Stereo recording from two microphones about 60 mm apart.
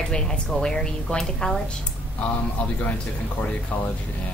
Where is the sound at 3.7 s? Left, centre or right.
Left.